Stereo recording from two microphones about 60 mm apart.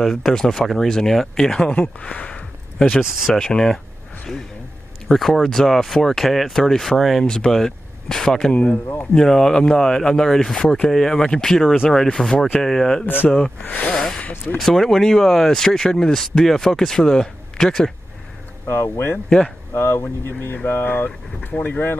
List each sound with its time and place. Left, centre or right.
0.0 s speech: centre
3.0 s speech: centre
3.3 s speech: centre
5.0 s speech: centre
13.0 s speech: left
13.7 s speech: left
13.9 s speech: centre
14.2 s speech: left
14.6 s speech: centre
18.7 s speech: left
19.2 s speech: centre
19.7 s speech: left